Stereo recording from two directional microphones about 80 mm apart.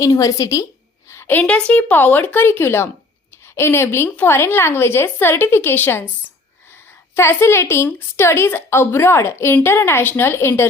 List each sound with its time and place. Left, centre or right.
0.0 s a woman's voice: left
1.3 s a woman's voice: centre